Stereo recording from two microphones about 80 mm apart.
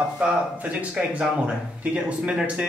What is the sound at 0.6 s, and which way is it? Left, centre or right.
Speech, centre.